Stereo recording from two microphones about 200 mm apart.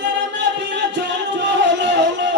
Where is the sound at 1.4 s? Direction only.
60° right (ahead or behind).